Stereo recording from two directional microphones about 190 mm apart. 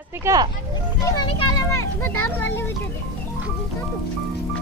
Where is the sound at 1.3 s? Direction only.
15° left (ahead or behind).